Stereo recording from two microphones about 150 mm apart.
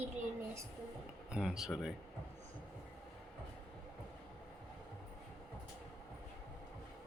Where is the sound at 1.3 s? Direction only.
5° right (ahead or behind).